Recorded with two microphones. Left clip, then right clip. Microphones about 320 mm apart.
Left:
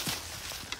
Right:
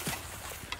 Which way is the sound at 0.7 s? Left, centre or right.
Right.